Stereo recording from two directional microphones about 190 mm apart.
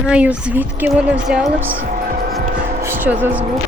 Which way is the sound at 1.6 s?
45° right (ahead or behind).